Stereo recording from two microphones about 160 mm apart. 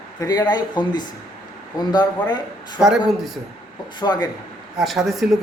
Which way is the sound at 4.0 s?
25° left (ahead or behind).